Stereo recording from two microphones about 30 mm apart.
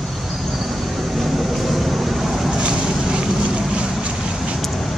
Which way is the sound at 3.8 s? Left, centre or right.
Right.